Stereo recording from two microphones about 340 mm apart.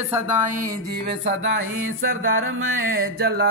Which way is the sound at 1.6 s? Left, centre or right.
Right.